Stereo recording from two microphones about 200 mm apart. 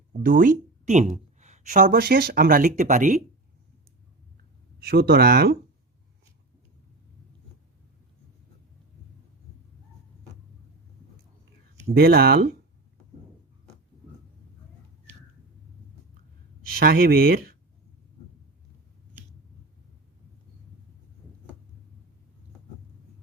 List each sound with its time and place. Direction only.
0.2 s speech: 45° right (ahead or behind)
4.8 s speech: 50° right (ahead or behind)
11.9 s speech: 50° right (ahead or behind)
16.7 s speech: 50° right (ahead or behind)